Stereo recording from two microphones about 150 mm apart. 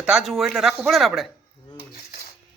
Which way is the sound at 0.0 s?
5° right (ahead or behind).